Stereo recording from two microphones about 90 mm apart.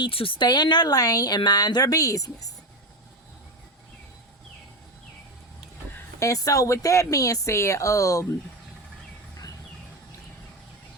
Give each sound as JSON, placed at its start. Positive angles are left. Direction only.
{"t": 0.0, "sound": "speech", "side_deg": 85}
{"t": 0.4, "sound": "speech", "side_deg": 55}
{"t": 5.9, "sound": "speech", "side_deg": 35}